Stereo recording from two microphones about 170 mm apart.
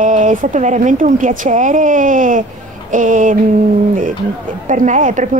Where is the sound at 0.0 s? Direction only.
50° right (ahead or behind).